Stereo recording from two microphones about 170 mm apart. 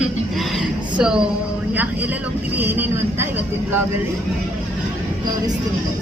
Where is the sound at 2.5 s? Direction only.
10° right (ahead or behind).